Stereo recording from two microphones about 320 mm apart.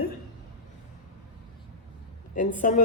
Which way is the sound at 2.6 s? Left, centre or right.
Left.